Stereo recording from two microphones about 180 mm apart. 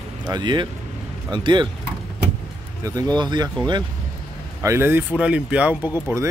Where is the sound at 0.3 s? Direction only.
25° right (ahead or behind).